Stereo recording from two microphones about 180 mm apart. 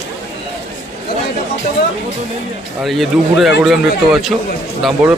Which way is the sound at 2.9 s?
Centre (ahead or behind).